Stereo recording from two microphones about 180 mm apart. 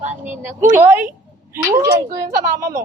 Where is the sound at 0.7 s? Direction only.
10° right (ahead or behind).